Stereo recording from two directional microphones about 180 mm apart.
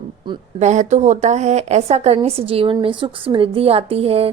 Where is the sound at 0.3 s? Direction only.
25° right (ahead or behind).